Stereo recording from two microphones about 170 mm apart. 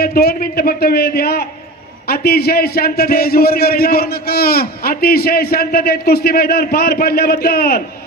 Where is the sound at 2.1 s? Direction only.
65° left (ahead or behind).